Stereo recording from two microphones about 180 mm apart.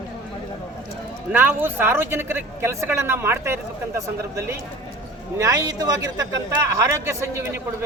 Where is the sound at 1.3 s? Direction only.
10° right (ahead or behind).